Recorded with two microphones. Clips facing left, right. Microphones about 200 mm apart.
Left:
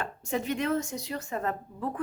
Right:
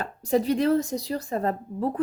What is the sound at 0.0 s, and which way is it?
A woman's voice, 35° right (ahead or behind).